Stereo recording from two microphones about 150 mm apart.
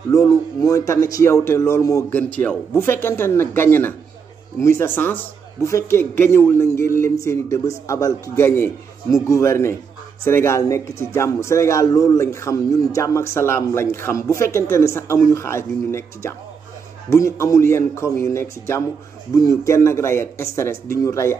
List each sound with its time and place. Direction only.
0.1 s a man's voice: 20° left (ahead or behind)